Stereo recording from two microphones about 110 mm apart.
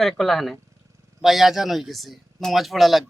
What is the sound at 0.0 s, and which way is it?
Speech, centre (ahead or behind).